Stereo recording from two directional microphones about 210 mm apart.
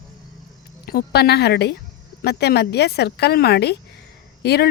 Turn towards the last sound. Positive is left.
turn(degrees=50)  # may be behind; listen again after turning